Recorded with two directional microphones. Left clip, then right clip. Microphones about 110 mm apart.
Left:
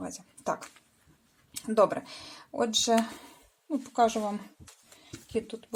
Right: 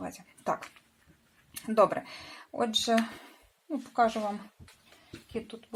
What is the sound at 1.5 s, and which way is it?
Speech, 35° left (ahead or behind).